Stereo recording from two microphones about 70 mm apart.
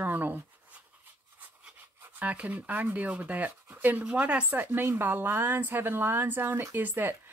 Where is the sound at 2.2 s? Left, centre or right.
Centre.